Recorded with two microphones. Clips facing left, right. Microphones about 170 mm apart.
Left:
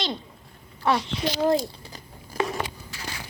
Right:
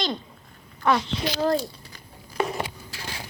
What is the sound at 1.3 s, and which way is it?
Speech, 15° left (ahead or behind).